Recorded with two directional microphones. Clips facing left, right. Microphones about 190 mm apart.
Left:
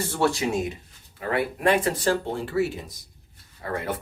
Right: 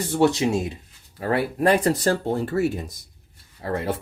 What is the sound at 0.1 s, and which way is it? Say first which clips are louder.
Speech: right 6 dB; 20° right (ahead or behind).